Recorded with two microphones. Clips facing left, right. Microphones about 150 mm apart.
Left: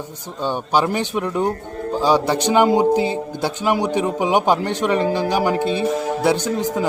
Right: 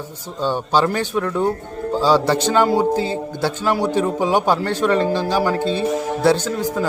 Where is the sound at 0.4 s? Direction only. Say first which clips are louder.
Right 1 dB; 15° left (ahead or behind).